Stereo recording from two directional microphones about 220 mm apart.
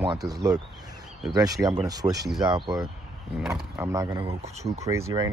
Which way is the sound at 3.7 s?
15° right (ahead or behind).